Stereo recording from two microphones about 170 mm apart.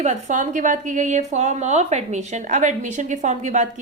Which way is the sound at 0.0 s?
45° right (ahead or behind).